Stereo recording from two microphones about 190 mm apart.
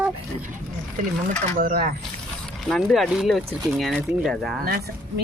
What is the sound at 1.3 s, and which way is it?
Speech, 45° right (ahead or behind).